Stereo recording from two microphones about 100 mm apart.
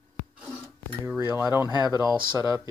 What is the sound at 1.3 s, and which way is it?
Speech, 30° right (ahead or behind).